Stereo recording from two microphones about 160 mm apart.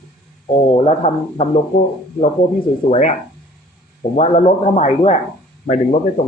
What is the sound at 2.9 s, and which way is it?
Speech, 50° left (ahead or behind).